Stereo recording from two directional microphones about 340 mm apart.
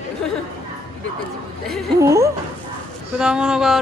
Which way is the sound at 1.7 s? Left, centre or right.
Centre.